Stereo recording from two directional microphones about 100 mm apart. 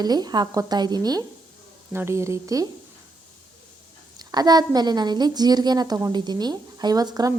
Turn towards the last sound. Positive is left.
turn(degrees=-40)  # may be behind; listen again after turning